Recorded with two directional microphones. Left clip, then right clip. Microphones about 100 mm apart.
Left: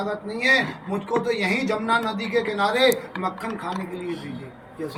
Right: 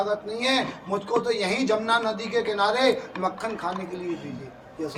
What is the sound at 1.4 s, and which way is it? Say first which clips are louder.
A man's voice: even; 15° right (ahead or behind).